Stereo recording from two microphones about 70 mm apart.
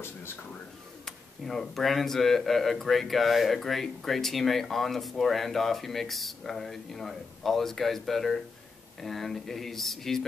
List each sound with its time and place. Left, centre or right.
1.0 s speech: centre